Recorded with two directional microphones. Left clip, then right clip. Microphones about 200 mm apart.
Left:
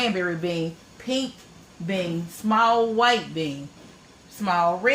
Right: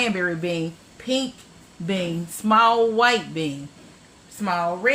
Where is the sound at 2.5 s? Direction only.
40° right (ahead or behind).